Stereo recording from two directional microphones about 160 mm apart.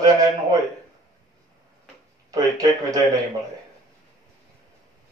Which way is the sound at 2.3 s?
20° right (ahead or behind).